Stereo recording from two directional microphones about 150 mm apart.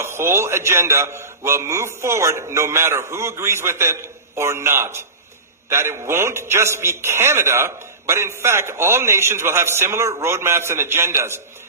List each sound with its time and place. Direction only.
0.0 s a man's voice: 15° right (ahead or behind)